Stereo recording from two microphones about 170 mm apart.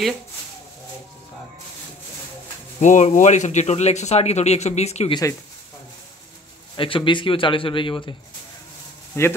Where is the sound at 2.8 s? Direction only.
45° left (ahead or behind).